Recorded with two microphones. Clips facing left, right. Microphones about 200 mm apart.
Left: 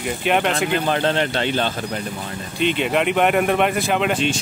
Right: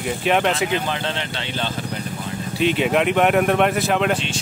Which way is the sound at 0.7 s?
50° left (ahead or behind).